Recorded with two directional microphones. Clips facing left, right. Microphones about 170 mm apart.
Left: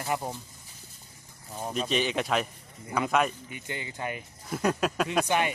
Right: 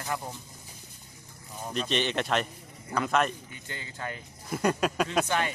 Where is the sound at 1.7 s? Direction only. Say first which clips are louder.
Left 1 dB; 5° left (ahead or behind).